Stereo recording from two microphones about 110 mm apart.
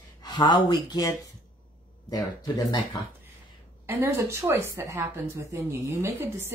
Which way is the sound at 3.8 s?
25° right (ahead or behind).